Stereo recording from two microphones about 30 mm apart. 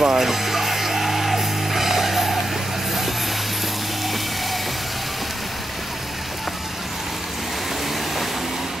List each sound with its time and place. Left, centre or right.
0.0 s music: centre